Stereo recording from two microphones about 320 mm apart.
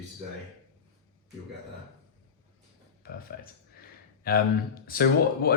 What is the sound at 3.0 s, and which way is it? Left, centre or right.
Speech, left.